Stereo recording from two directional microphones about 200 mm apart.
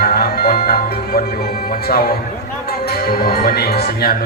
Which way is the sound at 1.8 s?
50° left (ahead or behind).